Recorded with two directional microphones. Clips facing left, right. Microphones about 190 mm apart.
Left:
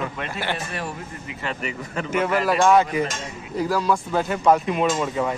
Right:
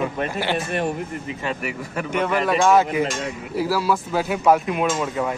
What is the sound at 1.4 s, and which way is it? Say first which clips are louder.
Speech: right 1 dB; 15° right (ahead or behind).